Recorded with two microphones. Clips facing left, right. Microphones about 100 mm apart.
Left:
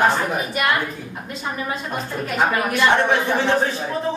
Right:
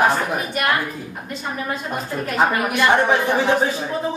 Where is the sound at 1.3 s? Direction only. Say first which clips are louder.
Even; centre (ahead or behind).